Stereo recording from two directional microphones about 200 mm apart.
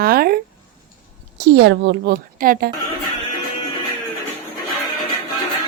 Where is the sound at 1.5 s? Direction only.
55° right (ahead or behind).